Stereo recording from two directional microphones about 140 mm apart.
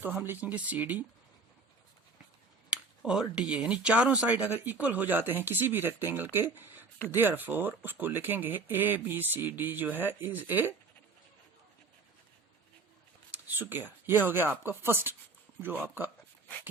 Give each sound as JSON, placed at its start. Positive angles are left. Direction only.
{"t": 0.0, "sound": "speech", "side_deg": -10}
{"t": 2.6, "sound": "speech", "side_deg": -5}
{"t": 13.3, "sound": "speech", "side_deg": -15}